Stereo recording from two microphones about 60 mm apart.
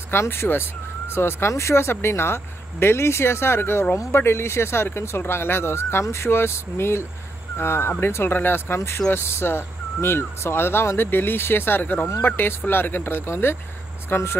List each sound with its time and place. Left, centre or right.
0.1 s speech: left